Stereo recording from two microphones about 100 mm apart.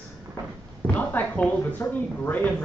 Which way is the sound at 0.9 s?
15° left (ahead or behind).